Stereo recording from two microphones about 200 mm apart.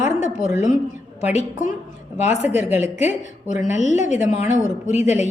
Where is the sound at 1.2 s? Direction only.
35° left (ahead or behind).